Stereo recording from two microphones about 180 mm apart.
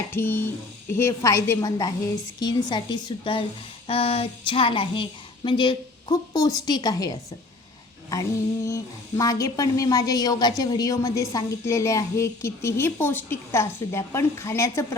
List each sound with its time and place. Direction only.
0.1 s a woman's voice: 10° left (ahead or behind)